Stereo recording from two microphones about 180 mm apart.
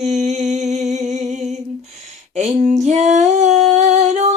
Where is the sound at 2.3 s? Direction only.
45° right (ahead or behind).